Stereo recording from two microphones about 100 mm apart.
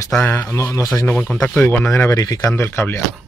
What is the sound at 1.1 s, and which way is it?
Speech, 15° left (ahead or behind).